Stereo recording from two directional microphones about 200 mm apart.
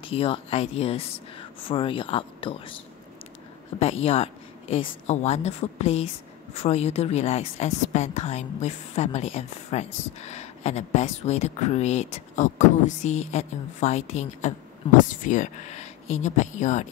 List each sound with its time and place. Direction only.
0.0 s speech: 30° left (ahead or behind)
4.0 s a woman's voice: 30° left (ahead or behind)